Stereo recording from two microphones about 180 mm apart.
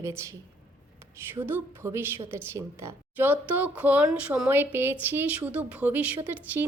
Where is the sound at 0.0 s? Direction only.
15° right (ahead or behind).